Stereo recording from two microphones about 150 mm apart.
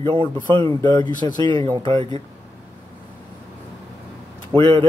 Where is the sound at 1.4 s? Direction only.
35° right (ahead or behind).